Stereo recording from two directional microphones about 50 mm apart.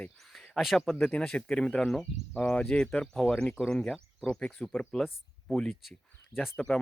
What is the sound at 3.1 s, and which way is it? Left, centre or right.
Speech, centre.